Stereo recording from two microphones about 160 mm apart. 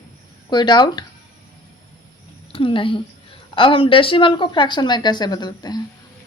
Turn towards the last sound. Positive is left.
turn(degrees=25)  # may be behind; listen again after turning